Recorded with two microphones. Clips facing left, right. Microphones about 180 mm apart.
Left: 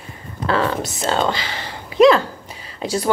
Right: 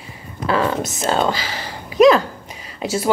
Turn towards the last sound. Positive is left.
turn(degrees=-10)  # may be behind; listen again after turning